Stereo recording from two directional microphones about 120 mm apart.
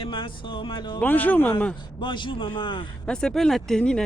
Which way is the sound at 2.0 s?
40° left (ahead or behind).